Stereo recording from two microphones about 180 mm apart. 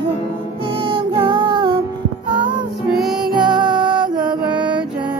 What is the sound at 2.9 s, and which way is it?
Music, centre (ahead or behind).